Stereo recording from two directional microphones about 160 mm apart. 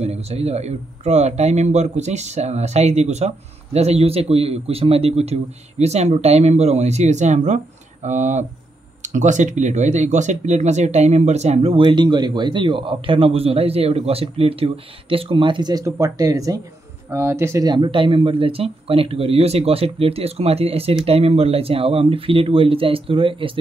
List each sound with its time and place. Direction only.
0.0 s speech: 40° right (ahead or behind)